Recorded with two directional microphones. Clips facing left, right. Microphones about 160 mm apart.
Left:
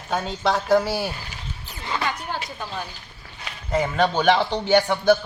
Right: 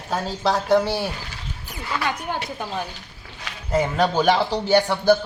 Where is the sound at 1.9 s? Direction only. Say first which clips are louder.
Right 1 dB; 25° left (ahead or behind).